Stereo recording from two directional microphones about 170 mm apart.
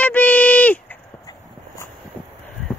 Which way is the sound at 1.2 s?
20° left (ahead or behind).